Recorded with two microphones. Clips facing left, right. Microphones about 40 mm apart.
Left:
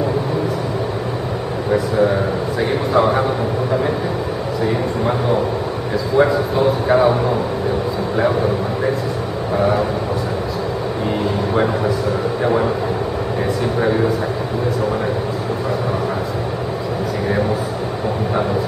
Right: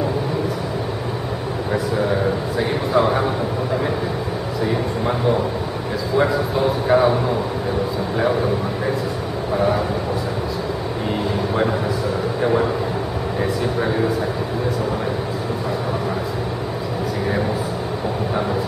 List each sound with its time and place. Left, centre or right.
1.7 s a sound: centre
2.9 s speech: centre
6.1 s speech: centre
12.4 s a man's voice: centre